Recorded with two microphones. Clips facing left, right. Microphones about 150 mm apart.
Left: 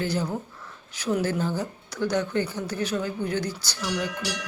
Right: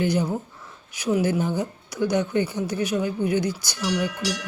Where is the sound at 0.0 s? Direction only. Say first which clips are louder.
Right 4 dB; 15° right (ahead or behind).